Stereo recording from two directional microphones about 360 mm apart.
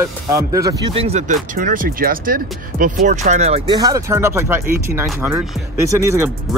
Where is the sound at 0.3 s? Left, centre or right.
Centre.